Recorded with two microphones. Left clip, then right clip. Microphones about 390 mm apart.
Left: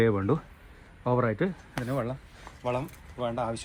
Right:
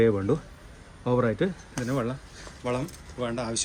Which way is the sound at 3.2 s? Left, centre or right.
Centre.